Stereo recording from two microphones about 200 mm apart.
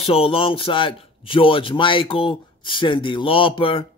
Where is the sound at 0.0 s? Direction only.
30° left (ahead or behind).